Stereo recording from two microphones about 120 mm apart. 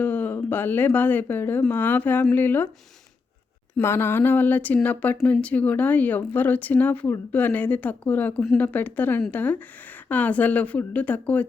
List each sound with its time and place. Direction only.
0.0 s speech: 15° left (ahead or behind)
3.8 s speech: 20° left (ahead or behind)